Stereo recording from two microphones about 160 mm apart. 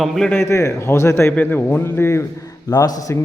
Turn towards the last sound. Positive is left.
turn(degrees=20)  # may be behind; listen again after turning